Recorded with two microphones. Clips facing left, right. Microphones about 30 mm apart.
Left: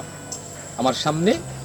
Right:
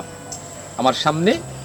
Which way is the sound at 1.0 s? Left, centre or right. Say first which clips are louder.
Right 3 dB; centre.